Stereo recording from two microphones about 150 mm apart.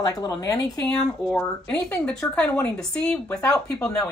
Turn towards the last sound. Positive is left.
turn(degrees=5)  # may be behind; listen again after turning